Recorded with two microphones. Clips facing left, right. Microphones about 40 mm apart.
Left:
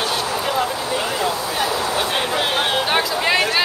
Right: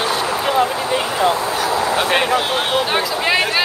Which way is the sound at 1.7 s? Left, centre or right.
Right.